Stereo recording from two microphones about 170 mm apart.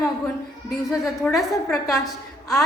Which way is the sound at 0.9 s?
Centre (ahead or behind).